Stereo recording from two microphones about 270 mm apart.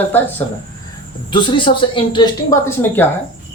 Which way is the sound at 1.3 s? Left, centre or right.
Centre.